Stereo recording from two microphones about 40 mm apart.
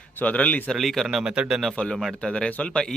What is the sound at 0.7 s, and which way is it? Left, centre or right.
Speech, centre.